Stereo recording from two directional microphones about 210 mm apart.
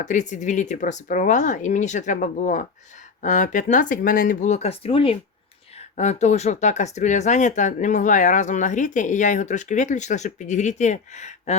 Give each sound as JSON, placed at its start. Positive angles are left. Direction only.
{"t": 0.0, "sound": "speech", "side_deg": 35}